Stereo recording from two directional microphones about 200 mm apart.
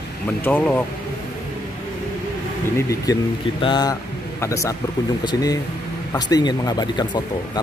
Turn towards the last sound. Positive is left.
turn(degrees=20)  # may be behind; listen again after turning